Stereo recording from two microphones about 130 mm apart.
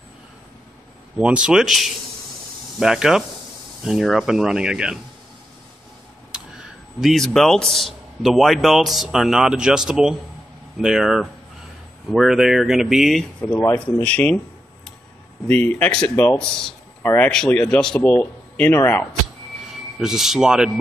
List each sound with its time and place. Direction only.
1.1 s a man's voice: 10° right (ahead or behind)
6.3 s a sound: 5° right (ahead or behind)
7.0 s a man's voice: centre (ahead or behind)
13.4 s speech: 15° left (ahead or behind)
15.4 s speech: 15° left (ahead or behind)
17.3 s speech: 5° left (ahead or behind)
19.7 s a man's voice: 5° right (ahead or behind)